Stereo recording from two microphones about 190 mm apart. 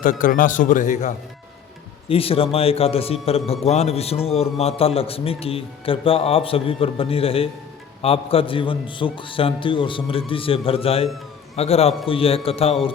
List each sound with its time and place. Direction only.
0.0 s a man's voice: 45° left (ahead or behind)
2.0 s a man's voice: 30° left (ahead or behind)